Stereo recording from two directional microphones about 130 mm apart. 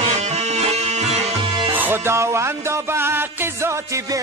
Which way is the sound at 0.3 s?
55° right (ahead or behind).